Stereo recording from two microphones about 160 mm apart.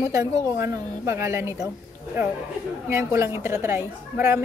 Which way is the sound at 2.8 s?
15° right (ahead or behind).